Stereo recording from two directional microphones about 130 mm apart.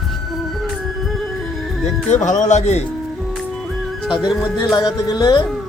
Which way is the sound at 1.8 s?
65° left (ahead or behind).